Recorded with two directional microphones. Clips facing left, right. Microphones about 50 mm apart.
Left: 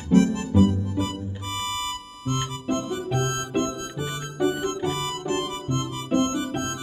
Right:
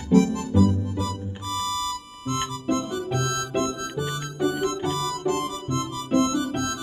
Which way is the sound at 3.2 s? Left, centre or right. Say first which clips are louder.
Even; left.